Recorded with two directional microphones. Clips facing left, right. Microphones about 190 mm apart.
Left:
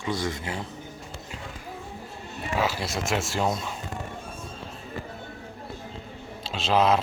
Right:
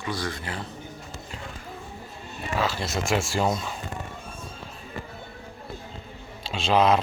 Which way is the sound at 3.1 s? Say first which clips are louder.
Right 2 dB; centre (ahead or behind).